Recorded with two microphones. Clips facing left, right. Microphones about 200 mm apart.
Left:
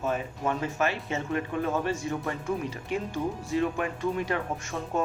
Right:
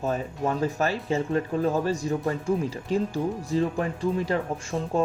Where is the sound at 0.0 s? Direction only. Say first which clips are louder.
Right 2 dB; 35° right (ahead or behind).